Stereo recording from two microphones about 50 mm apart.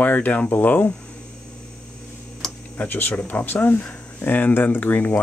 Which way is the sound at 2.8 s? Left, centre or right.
Left.